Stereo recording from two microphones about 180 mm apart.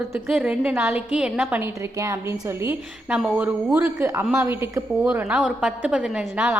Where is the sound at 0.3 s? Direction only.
10° right (ahead or behind).